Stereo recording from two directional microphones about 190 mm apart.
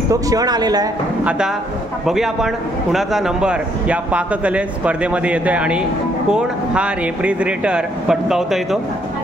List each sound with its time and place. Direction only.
0.1 s speech: 20° right (ahead or behind)
2.0 s a man's voice: centre (ahead or behind)